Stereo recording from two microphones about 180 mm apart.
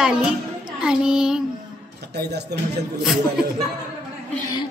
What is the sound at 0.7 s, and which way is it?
Child singing, 5° right (ahead or behind).